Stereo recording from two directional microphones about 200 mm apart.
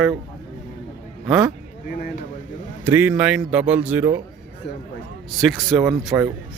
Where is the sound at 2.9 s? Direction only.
10° right (ahead or behind).